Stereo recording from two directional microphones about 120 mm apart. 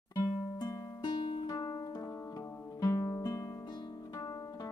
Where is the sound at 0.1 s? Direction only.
30° left (ahead or behind).